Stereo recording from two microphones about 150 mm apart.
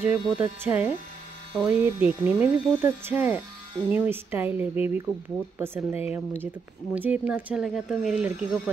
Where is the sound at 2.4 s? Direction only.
15° right (ahead or behind).